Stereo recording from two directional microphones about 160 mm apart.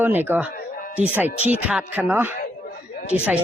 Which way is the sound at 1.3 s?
45° left (ahead or behind).